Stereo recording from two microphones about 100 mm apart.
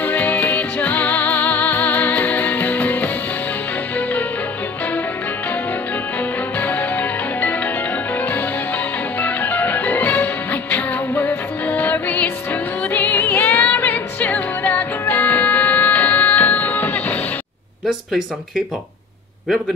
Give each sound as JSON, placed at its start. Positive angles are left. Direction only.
{"t": 0.0, "sound": "music", "side_deg": 15}
{"t": 6.6, "sound": "music", "side_deg": 15}